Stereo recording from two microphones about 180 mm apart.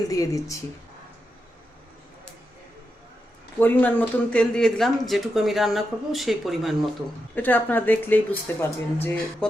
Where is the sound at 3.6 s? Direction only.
10° left (ahead or behind).